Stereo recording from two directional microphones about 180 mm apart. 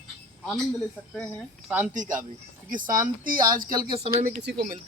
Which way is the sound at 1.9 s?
45° right (ahead or behind).